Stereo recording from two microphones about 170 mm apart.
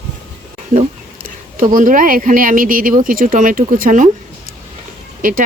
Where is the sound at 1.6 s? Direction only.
50° right (ahead or behind).